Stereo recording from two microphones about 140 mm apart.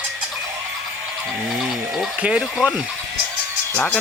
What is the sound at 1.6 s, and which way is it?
Sheep, 5° right (ahead or behind).